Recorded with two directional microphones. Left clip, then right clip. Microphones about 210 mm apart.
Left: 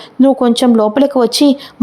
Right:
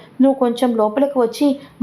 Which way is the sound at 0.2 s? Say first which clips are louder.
Left 5 dB; 35° left (ahead or behind).